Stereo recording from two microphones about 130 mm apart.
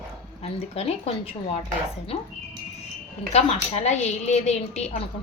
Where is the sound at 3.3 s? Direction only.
55° left (ahead or behind).